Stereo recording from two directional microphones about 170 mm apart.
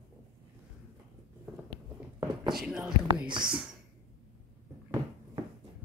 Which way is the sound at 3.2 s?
25° right (ahead or behind).